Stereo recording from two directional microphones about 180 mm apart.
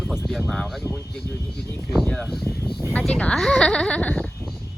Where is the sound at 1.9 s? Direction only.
5° left (ahead or behind).